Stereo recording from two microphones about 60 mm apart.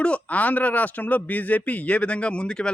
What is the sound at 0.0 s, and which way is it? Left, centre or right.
Speech, left.